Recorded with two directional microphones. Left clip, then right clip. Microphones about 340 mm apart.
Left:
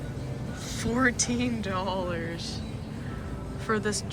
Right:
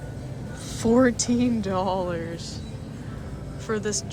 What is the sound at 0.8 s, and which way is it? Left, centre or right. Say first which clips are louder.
Speech: right 6 dB; centre.